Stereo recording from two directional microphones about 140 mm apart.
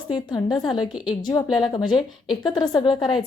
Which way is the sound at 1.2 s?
30° left (ahead or behind).